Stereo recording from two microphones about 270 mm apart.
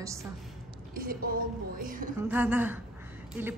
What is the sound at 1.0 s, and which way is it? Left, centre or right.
A woman's voice, right.